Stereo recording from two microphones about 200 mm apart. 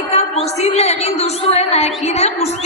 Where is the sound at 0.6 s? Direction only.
30° left (ahead or behind).